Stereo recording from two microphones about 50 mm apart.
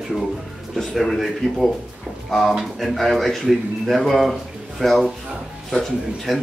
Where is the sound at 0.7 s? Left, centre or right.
Centre.